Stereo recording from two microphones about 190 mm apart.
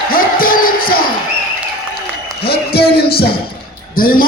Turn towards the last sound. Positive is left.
turn(degrees=50)  # may be behind; listen again after turning